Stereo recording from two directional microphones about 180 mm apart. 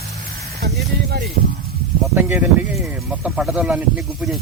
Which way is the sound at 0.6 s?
70° right (ahead or behind).